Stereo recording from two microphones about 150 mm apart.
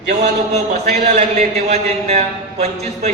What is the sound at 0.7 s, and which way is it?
A man's voice, 50° right (ahead or behind).